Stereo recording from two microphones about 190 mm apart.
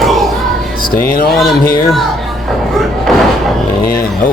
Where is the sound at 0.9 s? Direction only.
50° left (ahead or behind).